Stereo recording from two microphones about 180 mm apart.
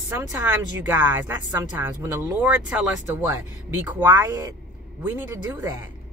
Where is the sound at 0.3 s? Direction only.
10° right (ahead or behind).